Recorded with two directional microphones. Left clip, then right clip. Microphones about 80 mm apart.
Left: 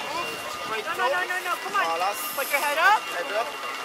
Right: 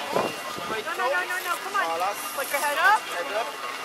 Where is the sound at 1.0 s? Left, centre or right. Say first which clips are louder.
Left 1 dB; left.